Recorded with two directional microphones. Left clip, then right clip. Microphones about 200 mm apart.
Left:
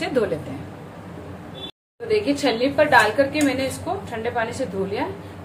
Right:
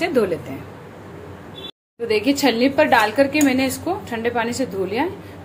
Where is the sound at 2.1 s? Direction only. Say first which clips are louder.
Right 2 dB; 40° right (ahead or behind).